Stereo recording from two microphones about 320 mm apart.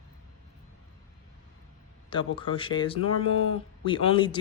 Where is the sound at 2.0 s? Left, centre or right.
Centre.